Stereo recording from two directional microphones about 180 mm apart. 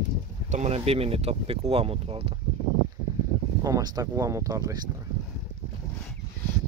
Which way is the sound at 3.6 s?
20° right (ahead or behind).